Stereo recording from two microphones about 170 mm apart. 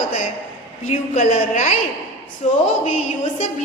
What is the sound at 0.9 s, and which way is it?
A woman's voice, 45° left (ahead or behind).